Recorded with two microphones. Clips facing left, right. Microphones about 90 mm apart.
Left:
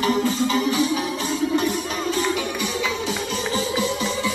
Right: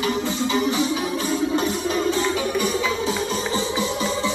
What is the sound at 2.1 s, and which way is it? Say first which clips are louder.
Music: right 2 dB; 30° right (ahead or behind).